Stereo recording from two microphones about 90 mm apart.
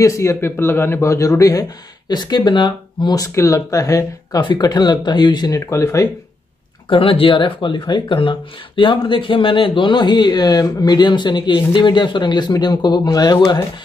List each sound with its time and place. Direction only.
0.0 s a man's voice: 35° left (ahead or behind); by 3.3 s 50° left (ahead or behind)
3.3 s a man's voice: 35° left (ahead or behind)
4.4 s speech: 55° left (ahead or behind)
5.7 s a man's voice: 30° left (ahead or behind)
6.9 s speech: 90° left; by 13.6 s 50° left (ahead or behind)